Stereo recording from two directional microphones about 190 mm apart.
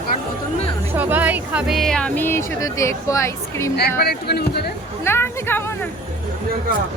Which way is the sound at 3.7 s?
55° left (ahead or behind).